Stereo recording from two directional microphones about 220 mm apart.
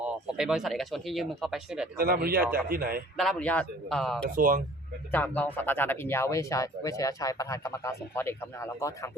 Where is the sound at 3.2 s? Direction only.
5° left (ahead or behind).